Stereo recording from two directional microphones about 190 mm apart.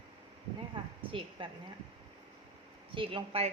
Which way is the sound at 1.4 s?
25° right (ahead or behind).